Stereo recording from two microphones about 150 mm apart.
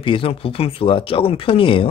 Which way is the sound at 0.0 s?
35° left (ahead or behind).